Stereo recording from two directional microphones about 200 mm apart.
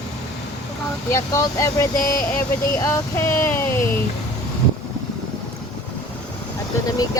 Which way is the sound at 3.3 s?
10° left (ahead or behind).